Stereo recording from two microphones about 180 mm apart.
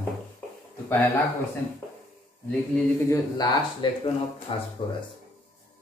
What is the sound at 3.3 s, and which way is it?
Speech, 25° left (ahead or behind).